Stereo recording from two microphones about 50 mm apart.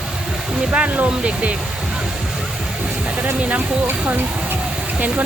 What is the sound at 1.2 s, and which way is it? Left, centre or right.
Speech, right.